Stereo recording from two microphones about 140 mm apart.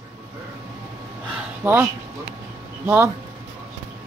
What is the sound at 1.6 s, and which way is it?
Speech, 15° right (ahead or behind).